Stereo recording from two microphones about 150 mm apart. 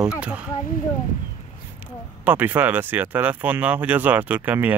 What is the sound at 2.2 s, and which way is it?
Speech, 10° right (ahead or behind).